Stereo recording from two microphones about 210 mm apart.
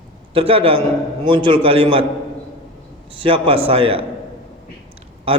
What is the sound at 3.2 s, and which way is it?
Speech, 25° right (ahead or behind).